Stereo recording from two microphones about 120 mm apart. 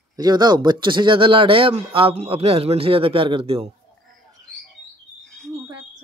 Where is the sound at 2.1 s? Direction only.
60° right (ahead or behind).